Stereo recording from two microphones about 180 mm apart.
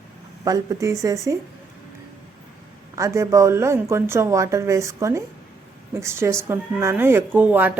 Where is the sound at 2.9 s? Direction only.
15° right (ahead or behind).